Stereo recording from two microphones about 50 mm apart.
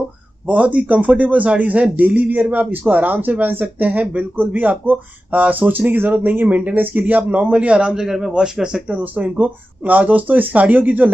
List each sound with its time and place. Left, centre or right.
0.5 s a man's voice: right
7.9 s speech: centre
8.8 s speech: right